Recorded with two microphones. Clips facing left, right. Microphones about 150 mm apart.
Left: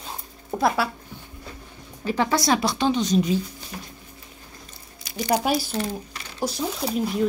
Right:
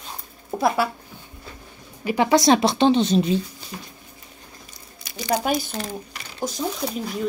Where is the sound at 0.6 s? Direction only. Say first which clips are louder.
Right 1 dB; centre (ahead or behind).